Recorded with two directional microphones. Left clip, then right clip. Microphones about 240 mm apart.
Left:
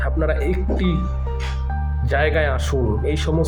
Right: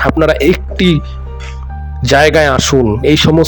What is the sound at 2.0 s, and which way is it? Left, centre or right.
A man's voice, right.